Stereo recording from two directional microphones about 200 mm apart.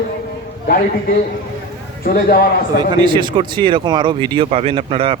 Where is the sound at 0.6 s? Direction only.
50° left (ahead or behind).